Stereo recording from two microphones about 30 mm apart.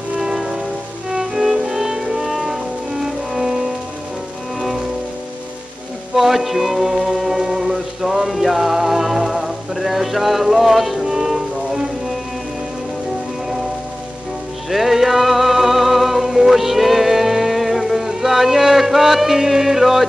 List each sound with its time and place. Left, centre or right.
0.2 s music: centre
6.1 s speech: centre
7.4 s music: centre
14.7 s music: centre